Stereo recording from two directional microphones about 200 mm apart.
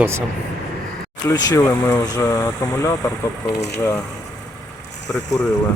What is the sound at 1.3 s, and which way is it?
Speech, 15° left (ahead or behind).